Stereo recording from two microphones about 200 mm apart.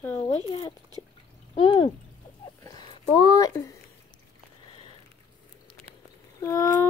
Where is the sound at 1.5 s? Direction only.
25° left (ahead or behind).